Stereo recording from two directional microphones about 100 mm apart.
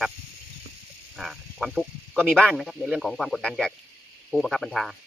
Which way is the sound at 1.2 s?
Centre (ahead or behind).